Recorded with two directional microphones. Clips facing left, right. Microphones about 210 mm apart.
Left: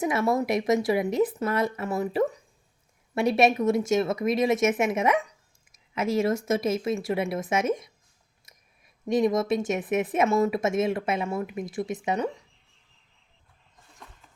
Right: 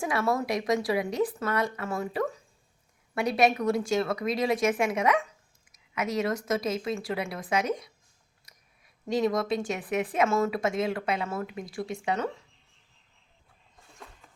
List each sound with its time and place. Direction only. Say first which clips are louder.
0.0 s speech: left 3 dB; 20° left (ahead or behind)
8.5 s clicking: left 2 dB; 25° left (ahead or behind)
9.0 s speech: left 3 dB; 20° left (ahead or behind)